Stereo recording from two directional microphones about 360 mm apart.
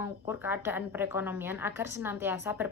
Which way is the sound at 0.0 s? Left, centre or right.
Centre.